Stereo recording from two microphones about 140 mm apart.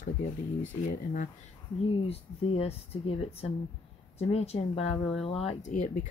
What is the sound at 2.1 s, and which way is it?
Speech, 45° left (ahead or behind).